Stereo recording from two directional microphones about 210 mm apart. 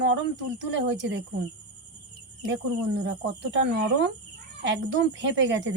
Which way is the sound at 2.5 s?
55° right (ahead or behind).